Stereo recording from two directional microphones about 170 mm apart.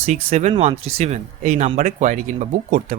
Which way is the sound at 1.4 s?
50° right (ahead or behind).